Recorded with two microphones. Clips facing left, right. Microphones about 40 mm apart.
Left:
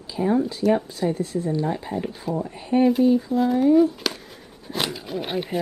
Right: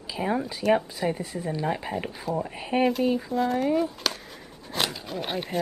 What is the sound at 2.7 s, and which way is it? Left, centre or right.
Speech, right.